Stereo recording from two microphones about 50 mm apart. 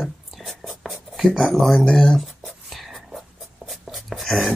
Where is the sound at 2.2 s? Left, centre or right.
Centre.